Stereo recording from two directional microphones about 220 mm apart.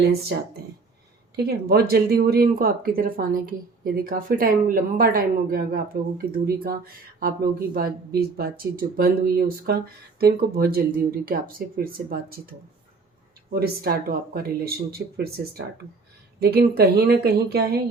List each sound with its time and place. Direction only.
1.4 s speech: 45° right (ahead or behind)